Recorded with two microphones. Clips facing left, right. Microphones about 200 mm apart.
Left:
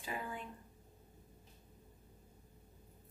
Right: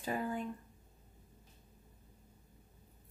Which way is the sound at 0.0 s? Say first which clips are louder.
Right 7 dB; 45° right (ahead or behind).